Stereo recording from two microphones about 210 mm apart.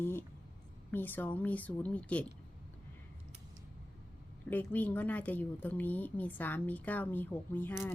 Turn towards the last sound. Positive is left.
turn(degrees=10)  # may be behind; listen again after turning